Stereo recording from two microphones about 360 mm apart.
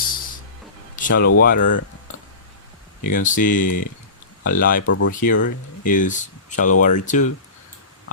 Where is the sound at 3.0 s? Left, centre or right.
Left.